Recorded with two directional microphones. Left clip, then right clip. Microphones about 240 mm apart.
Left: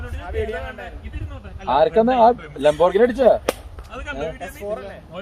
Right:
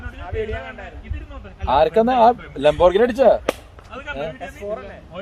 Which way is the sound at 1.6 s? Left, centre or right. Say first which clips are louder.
Even; right.